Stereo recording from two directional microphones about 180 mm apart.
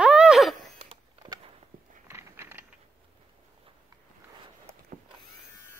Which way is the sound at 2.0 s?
15° right (ahead or behind).